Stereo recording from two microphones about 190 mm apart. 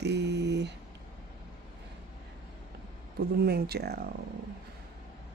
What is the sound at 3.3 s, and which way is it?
Speech, 55° right (ahead or behind).